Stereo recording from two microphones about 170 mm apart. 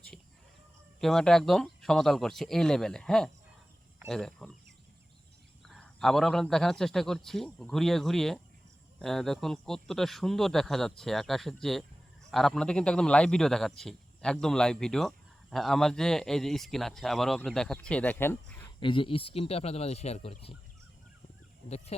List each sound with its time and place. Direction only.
0.9 s a man's voice: 5° left (ahead or behind)
5.6 s a man's voice: centre (ahead or behind)
18.8 s speech: 30° left (ahead or behind)